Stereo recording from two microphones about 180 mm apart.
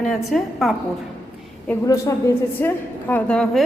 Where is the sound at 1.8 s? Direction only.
20° left (ahead or behind).